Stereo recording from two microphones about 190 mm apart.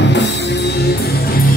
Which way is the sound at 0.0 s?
65° left (ahead or behind).